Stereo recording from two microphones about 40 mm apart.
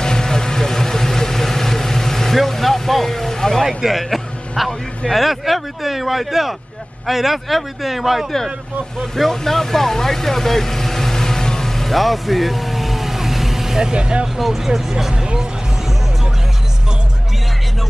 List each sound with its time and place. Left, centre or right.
0.0 s vehicle: centre
3.6 s speech: centre
9.1 s speech: centre
11.9 s vehicle: centre
13.9 s speech: right
14.2 s speech: centre